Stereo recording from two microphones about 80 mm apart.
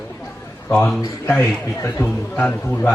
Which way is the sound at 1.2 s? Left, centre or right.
Left.